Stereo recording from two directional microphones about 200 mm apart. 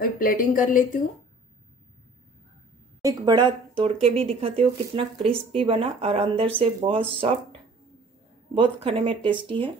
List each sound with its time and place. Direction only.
0.0 s speech: 45° left (ahead or behind)
3.0 s speech: 20° right (ahead or behind)
8.5 s speech: 25° right (ahead or behind)